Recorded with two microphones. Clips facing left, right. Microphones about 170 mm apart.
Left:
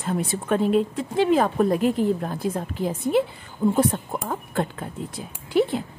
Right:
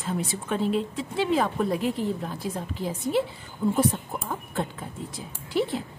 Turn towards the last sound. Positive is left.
turn(degrees=55)  # may be behind; listen again after turning